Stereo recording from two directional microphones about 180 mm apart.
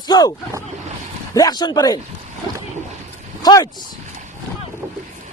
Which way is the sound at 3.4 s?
20° left (ahead or behind).